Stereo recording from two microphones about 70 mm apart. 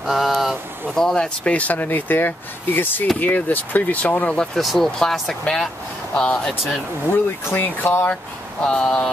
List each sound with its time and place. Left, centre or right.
0.0 s a sound: centre
0.8 s speech: centre
4.6 s speech: centre
7.1 s speech: left
8.6 s speech: centre